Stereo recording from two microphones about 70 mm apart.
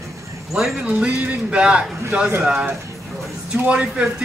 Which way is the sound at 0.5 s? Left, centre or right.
Centre.